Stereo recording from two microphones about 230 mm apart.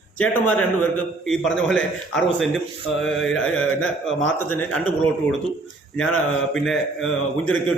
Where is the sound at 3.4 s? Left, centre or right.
Left.